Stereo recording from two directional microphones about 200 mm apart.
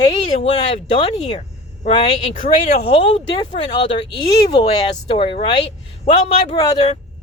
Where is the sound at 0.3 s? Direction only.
30° left (ahead or behind).